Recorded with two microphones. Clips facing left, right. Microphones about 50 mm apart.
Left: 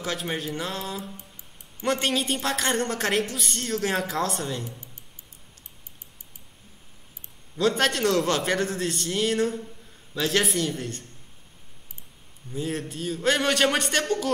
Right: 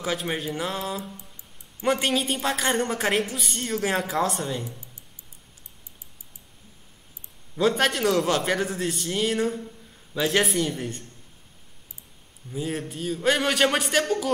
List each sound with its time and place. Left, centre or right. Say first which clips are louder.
0.0 s a woman's voice: right 2 dB; centre
4.6 s a sound: even; left
7.5 s a woman's voice: right 1 dB; centre
12.4 s a woman's voice: even; centre